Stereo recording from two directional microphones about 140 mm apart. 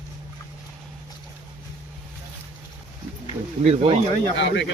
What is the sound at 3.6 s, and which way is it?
Speech, 50° right (ahead or behind).